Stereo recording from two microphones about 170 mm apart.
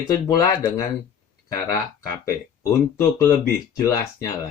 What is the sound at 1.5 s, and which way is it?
Speech, 20° left (ahead or behind).